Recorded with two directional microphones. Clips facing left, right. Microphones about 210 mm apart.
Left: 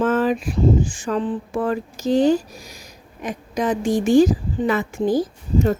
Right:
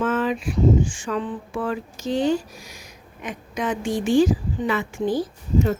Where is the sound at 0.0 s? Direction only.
40° left (ahead or behind).